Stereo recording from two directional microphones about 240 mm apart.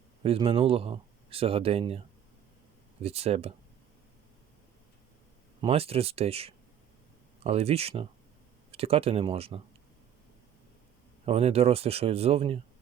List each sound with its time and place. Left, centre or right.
0.2 s speech: right
3.0 s speech: right
5.6 s speech: right
11.3 s speech: right